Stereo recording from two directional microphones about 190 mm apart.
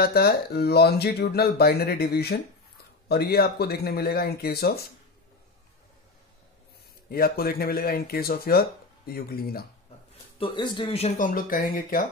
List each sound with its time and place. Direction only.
0.0 s speech: 55° left (ahead or behind)
7.1 s speech: 50° left (ahead or behind)
10.4 s speech: 25° left (ahead or behind); by 12.0 s 50° left (ahead or behind)